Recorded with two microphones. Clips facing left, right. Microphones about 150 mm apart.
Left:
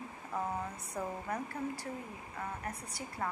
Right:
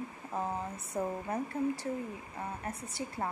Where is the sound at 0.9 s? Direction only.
25° right (ahead or behind).